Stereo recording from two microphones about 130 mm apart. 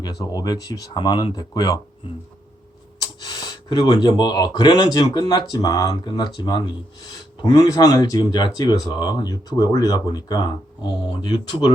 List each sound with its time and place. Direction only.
0.3 s speech: 30° left (ahead or behind)
3.0 s speech: 30° left (ahead or behind)